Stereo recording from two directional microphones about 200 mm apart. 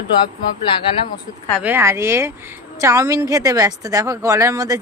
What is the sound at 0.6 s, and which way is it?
Speech, 25° left (ahead or behind).